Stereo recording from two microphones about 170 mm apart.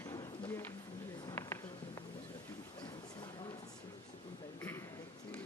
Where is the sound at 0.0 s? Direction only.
25° left (ahead or behind).